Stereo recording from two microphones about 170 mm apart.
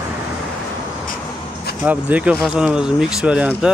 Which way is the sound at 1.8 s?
10° right (ahead or behind).